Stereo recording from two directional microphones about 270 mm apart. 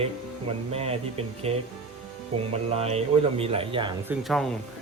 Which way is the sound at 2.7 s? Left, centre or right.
Right.